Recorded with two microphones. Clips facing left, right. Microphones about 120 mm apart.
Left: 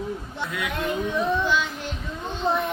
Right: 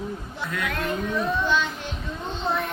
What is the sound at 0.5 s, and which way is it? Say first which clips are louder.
Speech: even; 15° left (ahead or behind).